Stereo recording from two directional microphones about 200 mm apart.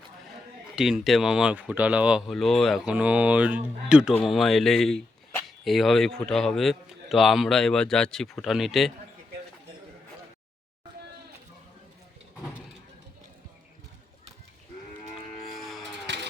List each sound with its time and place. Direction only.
0.8 s speech: centre (ahead or behind)
15.5 s music: centre (ahead or behind)
16.1 s vehicle: 60° right (ahead or behind)